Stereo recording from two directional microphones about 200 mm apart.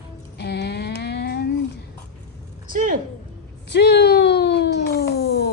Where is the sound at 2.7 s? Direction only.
40° right (ahead or behind).